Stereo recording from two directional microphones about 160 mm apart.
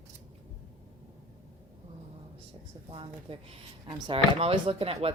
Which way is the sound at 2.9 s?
35° right (ahead or behind).